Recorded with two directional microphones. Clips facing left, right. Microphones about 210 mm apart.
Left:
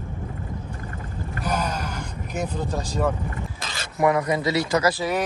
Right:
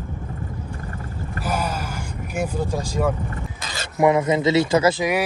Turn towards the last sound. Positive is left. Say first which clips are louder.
# right 4 dB
turn(degrees=-25)  # may be behind; listen again after turning